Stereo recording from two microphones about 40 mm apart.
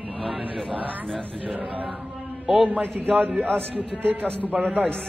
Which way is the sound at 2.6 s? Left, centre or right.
Right.